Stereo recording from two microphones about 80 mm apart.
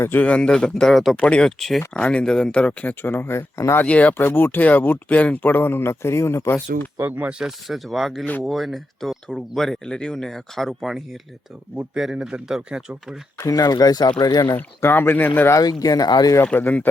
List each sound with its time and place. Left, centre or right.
0.0 s speech: left
3.8 s speech: centre
4.2 s speech: left
6.9 s speech: centre
7.3 s speech: centre
13.4 s speech: left
14.5 s speech: left
15.6 s speech: left
16.5 s speech: left